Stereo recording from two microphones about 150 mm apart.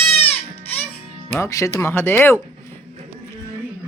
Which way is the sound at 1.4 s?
20° left (ahead or behind).